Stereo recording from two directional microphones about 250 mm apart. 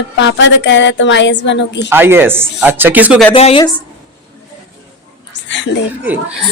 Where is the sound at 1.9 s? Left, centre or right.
Centre.